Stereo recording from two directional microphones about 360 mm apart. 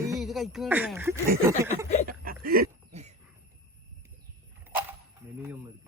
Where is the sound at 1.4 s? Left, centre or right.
Centre.